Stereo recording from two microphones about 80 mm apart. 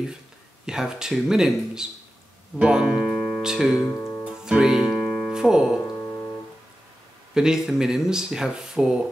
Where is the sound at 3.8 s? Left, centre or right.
Left.